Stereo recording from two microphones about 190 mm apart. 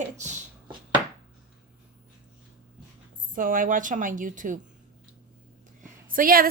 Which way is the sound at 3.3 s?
45° right (ahead or behind).